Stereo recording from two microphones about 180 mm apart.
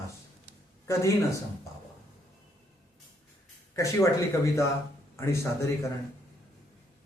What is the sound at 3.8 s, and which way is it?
A man's voice, 15° left (ahead or behind).